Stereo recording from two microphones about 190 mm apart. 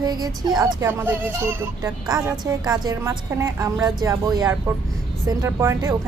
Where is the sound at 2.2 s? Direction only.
5° right (ahead or behind).